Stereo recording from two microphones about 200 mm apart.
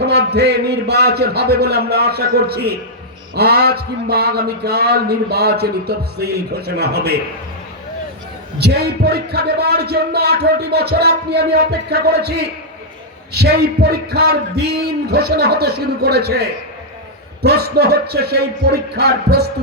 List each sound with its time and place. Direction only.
0.0 s a man's voice: 55° right (ahead or behind)
8.5 s a man's voice: 55° right (ahead or behind)